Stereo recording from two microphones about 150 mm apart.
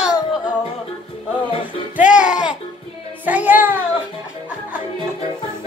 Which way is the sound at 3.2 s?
10° right (ahead or behind).